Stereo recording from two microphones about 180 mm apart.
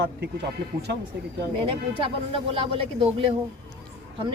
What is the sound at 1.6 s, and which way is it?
Speech, 30° right (ahead or behind).